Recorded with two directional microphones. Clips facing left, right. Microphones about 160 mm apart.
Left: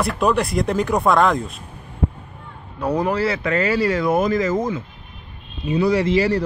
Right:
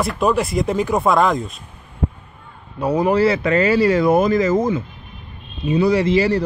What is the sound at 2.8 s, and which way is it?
Speech, 5° right (ahead or behind).